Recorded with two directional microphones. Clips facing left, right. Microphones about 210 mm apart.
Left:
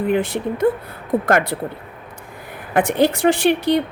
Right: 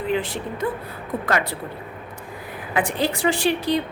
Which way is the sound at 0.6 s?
60° left (ahead or behind).